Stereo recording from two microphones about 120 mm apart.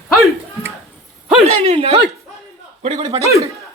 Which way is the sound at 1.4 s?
55° right (ahead or behind).